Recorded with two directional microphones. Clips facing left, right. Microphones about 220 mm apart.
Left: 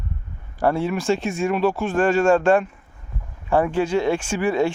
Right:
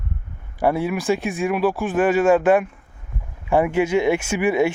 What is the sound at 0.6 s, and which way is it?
Speech, 15° right (ahead or behind).